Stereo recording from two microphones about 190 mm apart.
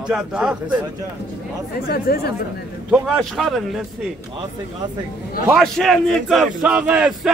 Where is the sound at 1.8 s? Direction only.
55° left (ahead or behind).